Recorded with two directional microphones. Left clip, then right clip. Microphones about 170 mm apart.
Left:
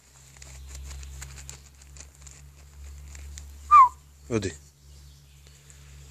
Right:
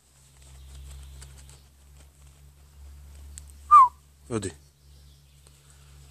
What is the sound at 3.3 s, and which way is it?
Whistling, 5° right (ahead or behind).